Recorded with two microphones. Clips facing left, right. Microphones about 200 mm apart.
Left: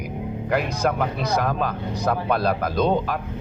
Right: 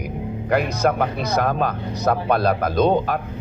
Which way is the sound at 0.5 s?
50° right (ahead or behind).